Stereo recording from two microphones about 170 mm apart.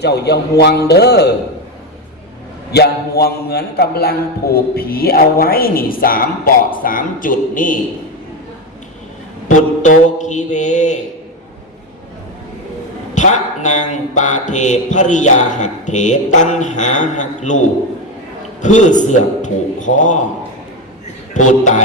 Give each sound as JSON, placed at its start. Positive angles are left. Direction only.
{"t": 0.3, "sound": "a man's voice", "side_deg": 75}
{"t": 2.7, "sound": "a man's voice", "side_deg": 70}
{"t": 9.5, "sound": "mantra", "side_deg": 45}
{"t": 13.1, "sound": "mantra", "side_deg": 45}
{"t": 18.6, "sound": "mantra", "side_deg": 45}
{"t": 21.3, "sound": "mantra", "side_deg": 45}